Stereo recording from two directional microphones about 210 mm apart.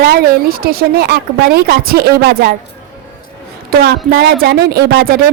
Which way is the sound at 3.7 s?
50° right (ahead or behind).